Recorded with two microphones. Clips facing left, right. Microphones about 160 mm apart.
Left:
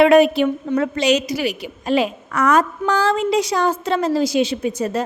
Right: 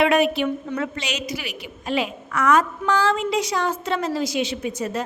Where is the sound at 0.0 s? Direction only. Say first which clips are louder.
Left 6 dB; 35° left (ahead or behind).